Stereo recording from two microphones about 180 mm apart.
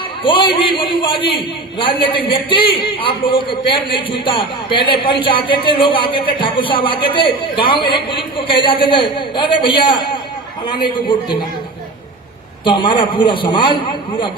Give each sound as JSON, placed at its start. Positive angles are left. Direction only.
{"t": 0.2, "sound": "a man's voice", "side_deg": 30}
{"t": 12.6, "sound": "a man's voice", "side_deg": 25}